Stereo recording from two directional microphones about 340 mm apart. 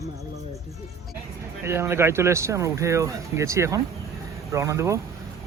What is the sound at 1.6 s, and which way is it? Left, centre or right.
Speech, centre.